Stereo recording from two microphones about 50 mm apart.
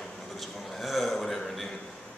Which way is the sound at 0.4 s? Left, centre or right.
Centre.